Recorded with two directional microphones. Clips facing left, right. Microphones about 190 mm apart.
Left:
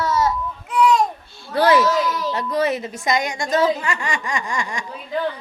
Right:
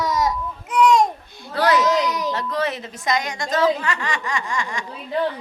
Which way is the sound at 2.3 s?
10° left (ahead or behind).